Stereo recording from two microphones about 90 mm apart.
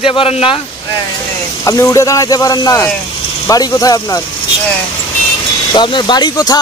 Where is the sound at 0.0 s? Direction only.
90° left.